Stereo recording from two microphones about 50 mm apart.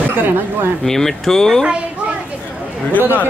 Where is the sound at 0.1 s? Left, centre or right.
Right.